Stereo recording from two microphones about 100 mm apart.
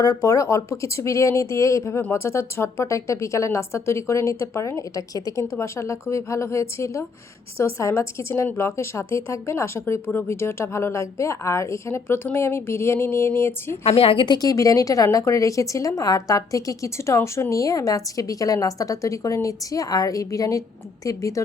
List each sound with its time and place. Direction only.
0.0 s a woman's voice: 35° left (ahead or behind)
13.8 s a woman's voice: 70° left (ahead or behind)
14.3 s a woman's voice: 35° left (ahead or behind)